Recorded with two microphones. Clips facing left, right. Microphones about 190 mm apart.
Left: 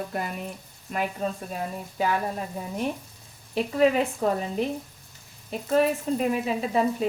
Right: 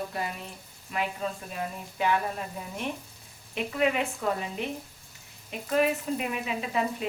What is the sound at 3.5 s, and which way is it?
Speech, 35° left (ahead or behind).